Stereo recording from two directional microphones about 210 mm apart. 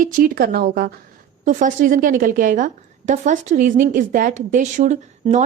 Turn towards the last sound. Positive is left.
turn(degrees=-35)  # may be behind; listen again after turning